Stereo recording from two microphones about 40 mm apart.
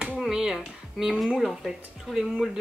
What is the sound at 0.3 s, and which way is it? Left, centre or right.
Music, centre.